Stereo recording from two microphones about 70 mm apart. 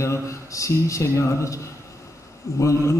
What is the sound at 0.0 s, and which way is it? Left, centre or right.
Speech, left.